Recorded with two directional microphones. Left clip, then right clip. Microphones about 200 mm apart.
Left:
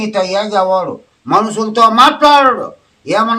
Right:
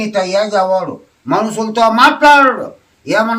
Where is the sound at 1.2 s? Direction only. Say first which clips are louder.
Left 3 dB; 20° left (ahead or behind).